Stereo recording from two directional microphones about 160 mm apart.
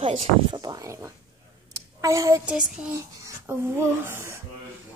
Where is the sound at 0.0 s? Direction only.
40° right (ahead or behind).